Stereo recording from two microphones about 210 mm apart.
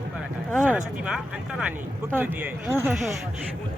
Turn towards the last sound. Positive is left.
turn(degrees=0)  # may be behind; listen again after turning